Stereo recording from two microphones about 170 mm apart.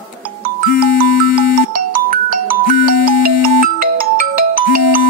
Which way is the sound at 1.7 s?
55° right (ahead or behind).